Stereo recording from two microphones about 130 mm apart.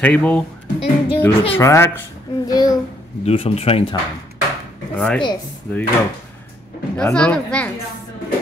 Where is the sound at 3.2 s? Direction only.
50° left (ahead or behind).